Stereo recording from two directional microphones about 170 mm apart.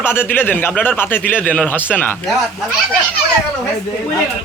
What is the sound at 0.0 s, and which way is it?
Speech, 15° left (ahead or behind).